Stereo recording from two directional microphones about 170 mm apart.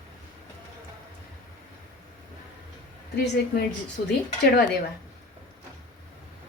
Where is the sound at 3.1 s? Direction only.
75° left (ahead or behind).